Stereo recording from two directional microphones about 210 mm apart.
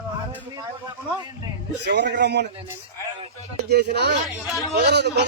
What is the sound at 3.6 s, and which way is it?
Speech, 50° right (ahead or behind).